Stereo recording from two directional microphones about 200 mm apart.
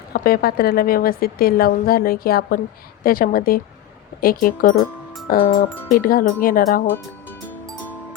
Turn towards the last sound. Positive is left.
turn(degrees=10)  # may be behind; listen again after turning